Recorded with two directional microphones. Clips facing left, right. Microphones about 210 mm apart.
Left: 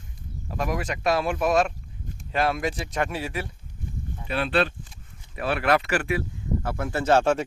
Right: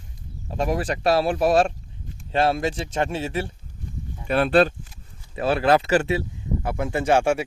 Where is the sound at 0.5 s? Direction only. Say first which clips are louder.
Right 4 dB; 30° right (ahead or behind).